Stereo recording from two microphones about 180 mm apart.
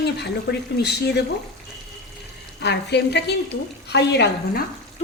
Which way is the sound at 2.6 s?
70° left (ahead or behind).